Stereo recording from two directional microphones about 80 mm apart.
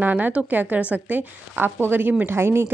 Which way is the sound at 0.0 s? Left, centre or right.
Right.